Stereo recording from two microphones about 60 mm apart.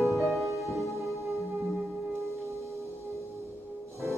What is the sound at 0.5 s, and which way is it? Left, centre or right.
Music, right.